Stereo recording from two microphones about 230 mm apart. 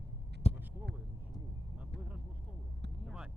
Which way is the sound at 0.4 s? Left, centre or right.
Left.